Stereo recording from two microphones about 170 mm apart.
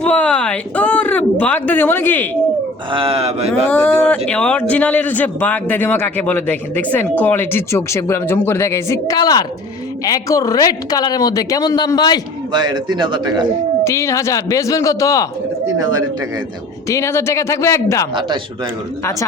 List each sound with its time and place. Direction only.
0.0 s a man's voice: 5° left (ahead or behind)
2.9 s speech: 35° right (ahead or behind)
3.7 s a man's voice: 10° left (ahead or behind); by 12.2 s 25° left (ahead or behind)
12.5 s speech: 25° right (ahead or behind)
13.8 s a woman's voice: 15° left (ahead or behind)
15.6 s speech: 20° right (ahead or behind)
16.9 s a man's voice: 15° left (ahead or behind)
18.1 s speech: 25° right (ahead or behind)